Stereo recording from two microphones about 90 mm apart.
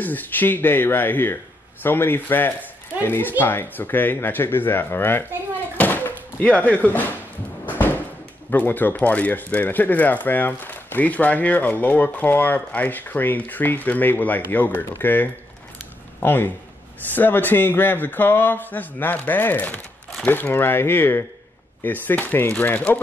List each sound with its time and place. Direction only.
0.0 s speech: 20° left (ahead or behind)
5.8 s slam: 20° left (ahead or behind)
7.6 s music: 20° left (ahead or behind)
8.5 s speech: 20° left (ahead or behind)